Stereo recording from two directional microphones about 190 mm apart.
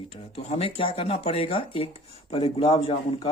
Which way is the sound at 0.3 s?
30° left (ahead or behind).